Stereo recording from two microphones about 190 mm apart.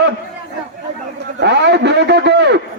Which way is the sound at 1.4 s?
65° right (ahead or behind).